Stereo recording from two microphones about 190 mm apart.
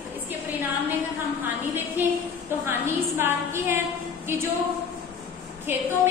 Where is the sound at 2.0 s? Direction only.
10° right (ahead or behind).